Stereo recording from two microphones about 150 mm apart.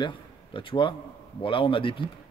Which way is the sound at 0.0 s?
35° left (ahead or behind).